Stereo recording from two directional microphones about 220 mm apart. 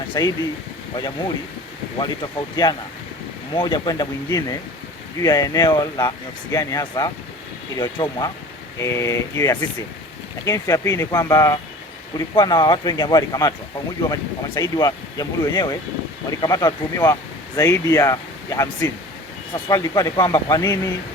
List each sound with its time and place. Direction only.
0.1 s speech: 15° left (ahead or behind)
2.0 s speech: 20° left (ahead or behind)